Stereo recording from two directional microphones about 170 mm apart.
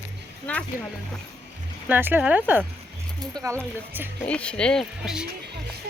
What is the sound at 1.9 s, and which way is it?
Speech, 10° right (ahead or behind).